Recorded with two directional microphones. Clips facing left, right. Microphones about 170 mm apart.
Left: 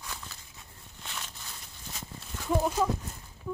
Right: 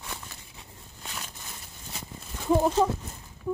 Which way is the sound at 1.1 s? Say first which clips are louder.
Right 1 dB; 10° right (ahead or behind).